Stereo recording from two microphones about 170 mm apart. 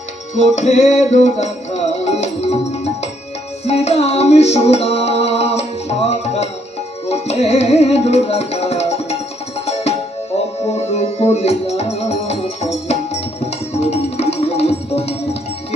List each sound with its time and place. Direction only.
0.3 s music: 40° left (ahead or behind)
10.7 s music: 40° left (ahead or behind)
12.9 s tabla: 40° left (ahead or behind)